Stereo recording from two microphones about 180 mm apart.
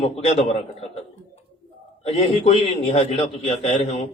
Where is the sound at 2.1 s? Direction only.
35° left (ahead or behind).